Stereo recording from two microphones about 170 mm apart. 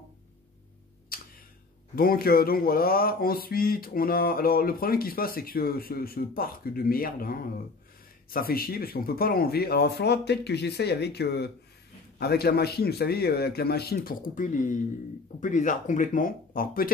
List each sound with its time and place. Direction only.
1.1 s tick: 60° left (ahead or behind)
2.0 s speech: 60° left (ahead or behind)